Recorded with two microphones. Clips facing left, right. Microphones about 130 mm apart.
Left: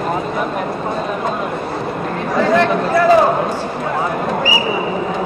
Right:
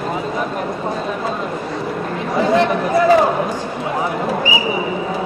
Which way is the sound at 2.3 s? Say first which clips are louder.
Left 1 dB; 20° right (ahead or behind).